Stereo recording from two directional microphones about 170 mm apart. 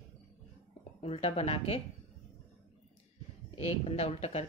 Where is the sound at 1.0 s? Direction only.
35° left (ahead or behind).